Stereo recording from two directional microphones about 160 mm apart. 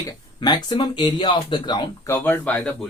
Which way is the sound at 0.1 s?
25° left (ahead or behind).